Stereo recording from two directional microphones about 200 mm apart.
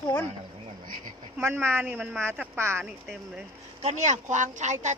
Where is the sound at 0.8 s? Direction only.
45° right (ahead or behind).